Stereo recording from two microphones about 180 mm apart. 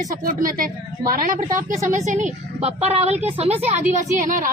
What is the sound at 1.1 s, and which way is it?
A woman's voice, 45° right (ahead or behind).